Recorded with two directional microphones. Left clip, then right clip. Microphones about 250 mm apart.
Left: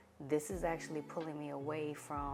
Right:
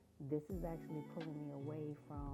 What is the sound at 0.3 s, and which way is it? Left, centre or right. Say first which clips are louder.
Speech: left 8 dB; centre.